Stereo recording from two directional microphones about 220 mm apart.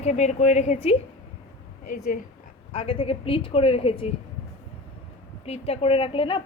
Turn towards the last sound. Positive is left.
turn(degrees=25)  # may be behind; listen again after turning